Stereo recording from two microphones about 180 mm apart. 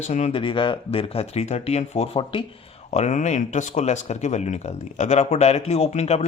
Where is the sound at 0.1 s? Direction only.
35° left (ahead or behind).